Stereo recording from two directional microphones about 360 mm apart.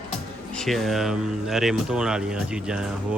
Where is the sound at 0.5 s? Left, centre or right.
Centre.